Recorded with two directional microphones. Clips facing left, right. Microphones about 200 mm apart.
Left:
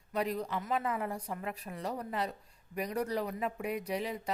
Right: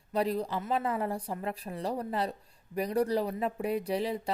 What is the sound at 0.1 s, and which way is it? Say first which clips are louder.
A woman's voice: right 4 dB; 30° right (ahead or behind).